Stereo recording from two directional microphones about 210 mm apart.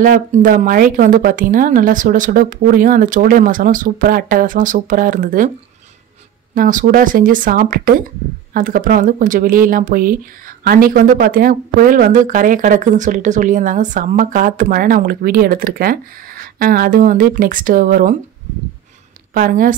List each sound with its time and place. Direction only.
0.0 s speech: 40° right (ahead or behind)
6.5 s speech: 40° right (ahead or behind)
19.3 s speech: 40° right (ahead or behind)